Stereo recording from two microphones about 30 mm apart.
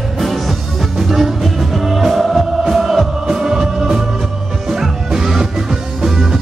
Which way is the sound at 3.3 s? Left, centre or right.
Centre.